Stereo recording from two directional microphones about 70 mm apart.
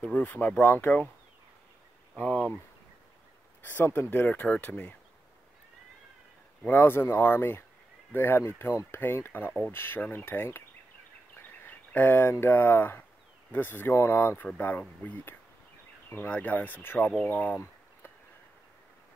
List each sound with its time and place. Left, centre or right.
0.0 s speech: left
2.1 s speech: left
3.7 s speech: left
4.3 s speech: left
6.7 s speech: left